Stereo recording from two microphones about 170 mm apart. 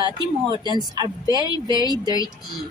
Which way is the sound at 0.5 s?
25° right (ahead or behind).